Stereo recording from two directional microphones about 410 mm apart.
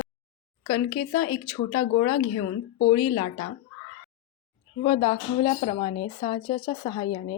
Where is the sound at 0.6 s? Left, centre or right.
Centre.